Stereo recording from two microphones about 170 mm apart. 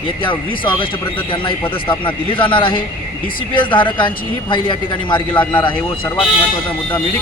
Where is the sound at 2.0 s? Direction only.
30° left (ahead or behind).